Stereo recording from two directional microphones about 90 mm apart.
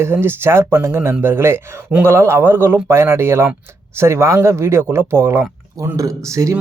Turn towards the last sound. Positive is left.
turn(degrees=-35)  # may be behind; listen again after turning